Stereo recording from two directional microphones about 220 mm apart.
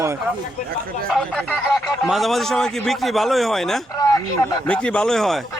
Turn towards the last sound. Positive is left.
turn(degrees=0)  # may be behind; listen again after turning